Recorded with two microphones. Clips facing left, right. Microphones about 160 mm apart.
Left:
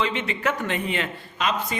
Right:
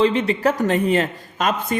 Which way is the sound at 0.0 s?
35° right (ahead or behind).